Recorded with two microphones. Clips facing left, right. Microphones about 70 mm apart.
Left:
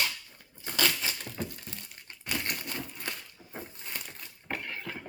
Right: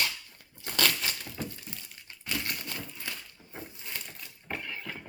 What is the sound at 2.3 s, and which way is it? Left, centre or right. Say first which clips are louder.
Crushing: left 1 dB; left.